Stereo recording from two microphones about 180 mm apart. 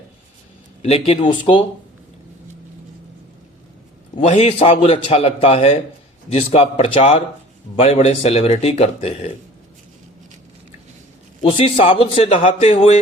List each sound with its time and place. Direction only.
0.8 s speech: 35° left (ahead or behind)
4.3 s speech: 35° left (ahead or behind)
11.4 s speech: 30° left (ahead or behind)